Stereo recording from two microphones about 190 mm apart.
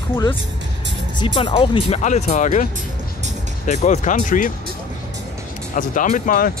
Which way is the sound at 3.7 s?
40° left (ahead or behind).